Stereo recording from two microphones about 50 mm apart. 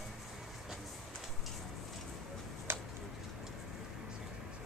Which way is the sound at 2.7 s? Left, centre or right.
Right.